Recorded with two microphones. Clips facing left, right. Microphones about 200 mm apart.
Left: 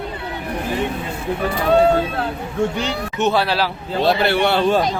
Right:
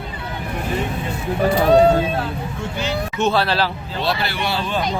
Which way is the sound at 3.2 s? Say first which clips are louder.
Left 1 dB; 15° left (ahead or behind).